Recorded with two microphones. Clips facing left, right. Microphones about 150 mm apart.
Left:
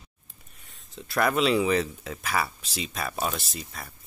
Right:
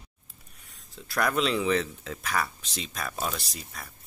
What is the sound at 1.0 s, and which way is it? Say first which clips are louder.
Speech: left 3 dB; centre (ahead or behind).